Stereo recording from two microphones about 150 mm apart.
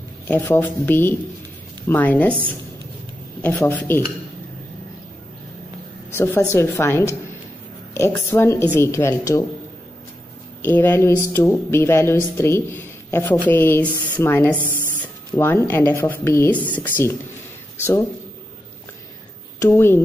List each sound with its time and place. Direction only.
0.3 s speech: 10° left (ahead or behind)
3.4 s speech: 10° left (ahead or behind)
6.1 s speech: 15° left (ahead or behind)
10.6 s speech: 15° left (ahead or behind)
19.6 s speech: 15° left (ahead or behind)